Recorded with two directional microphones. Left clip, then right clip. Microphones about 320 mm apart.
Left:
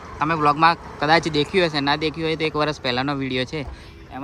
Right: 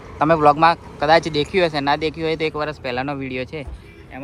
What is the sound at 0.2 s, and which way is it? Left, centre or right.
Speech, centre.